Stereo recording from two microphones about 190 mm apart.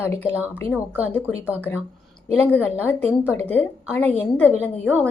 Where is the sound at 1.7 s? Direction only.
15° left (ahead or behind).